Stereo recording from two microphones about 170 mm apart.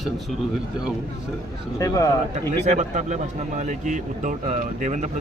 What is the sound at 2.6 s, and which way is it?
A man's voice, 45° right (ahead or behind).